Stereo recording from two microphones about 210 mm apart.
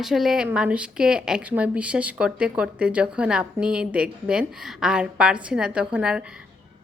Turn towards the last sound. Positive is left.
turn(degrees=-5)  # may be behind; listen again after turning